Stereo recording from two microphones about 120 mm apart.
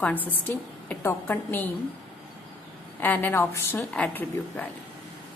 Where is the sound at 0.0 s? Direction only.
15° left (ahead or behind).